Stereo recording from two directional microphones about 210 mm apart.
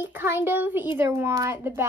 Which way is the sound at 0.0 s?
10° right (ahead or behind).